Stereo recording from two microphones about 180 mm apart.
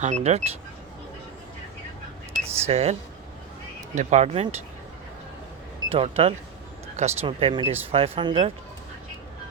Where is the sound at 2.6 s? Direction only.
35° right (ahead or behind).